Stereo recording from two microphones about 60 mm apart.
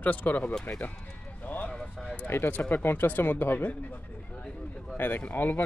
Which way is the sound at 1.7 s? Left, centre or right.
Centre.